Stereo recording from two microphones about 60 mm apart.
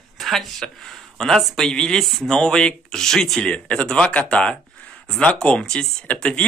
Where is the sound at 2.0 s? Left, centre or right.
Centre.